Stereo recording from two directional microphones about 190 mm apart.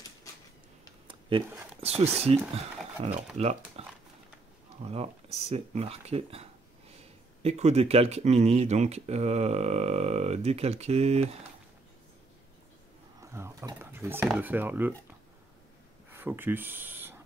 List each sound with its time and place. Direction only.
1.0 s speech: 25° right (ahead or behind)
13.2 s speech: 15° right (ahead or behind)
16.1 s speech: 10° right (ahead or behind)